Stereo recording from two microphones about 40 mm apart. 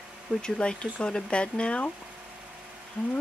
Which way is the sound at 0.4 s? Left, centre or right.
Left.